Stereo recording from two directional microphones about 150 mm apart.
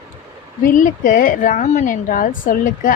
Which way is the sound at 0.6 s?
65° left (ahead or behind).